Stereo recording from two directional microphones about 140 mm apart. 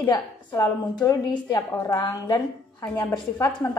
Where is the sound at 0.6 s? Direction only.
30° left (ahead or behind).